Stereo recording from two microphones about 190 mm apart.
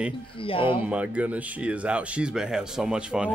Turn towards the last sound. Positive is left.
turn(degrees=-5)  # may be behind; listen again after turning